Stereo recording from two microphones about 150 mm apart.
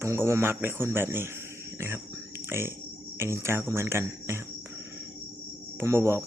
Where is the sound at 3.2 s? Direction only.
20° right (ahead or behind).